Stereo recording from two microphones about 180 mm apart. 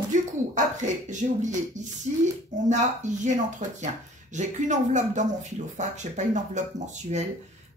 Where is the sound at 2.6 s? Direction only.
40° right (ahead or behind).